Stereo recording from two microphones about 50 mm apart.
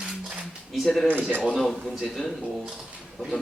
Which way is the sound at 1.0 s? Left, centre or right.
Right.